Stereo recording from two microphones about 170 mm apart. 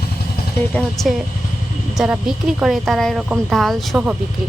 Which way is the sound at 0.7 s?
Centre (ahead or behind).